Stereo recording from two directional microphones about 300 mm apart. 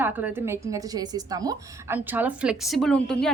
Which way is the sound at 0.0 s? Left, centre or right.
Centre.